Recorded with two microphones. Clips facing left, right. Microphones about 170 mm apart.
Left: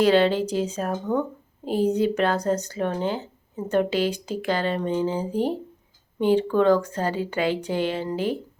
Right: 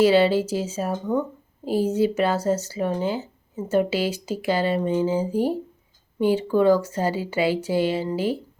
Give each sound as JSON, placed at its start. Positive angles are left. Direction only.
{"t": 0.0, "sound": "speech", "side_deg": -5}